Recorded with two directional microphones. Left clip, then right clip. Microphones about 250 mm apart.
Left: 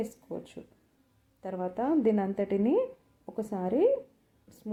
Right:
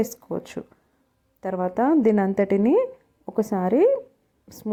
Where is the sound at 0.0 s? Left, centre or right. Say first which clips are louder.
Right 10 dB; right.